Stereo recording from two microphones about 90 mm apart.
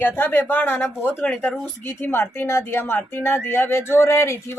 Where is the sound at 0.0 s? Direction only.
20° left (ahead or behind).